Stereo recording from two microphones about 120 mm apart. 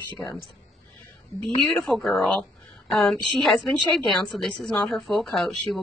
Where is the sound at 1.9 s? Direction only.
5° left (ahead or behind).